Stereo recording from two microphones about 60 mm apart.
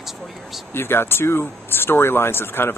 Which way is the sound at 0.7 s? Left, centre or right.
Left.